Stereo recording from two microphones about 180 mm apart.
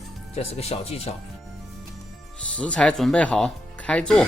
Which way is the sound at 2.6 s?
5° left (ahead or behind).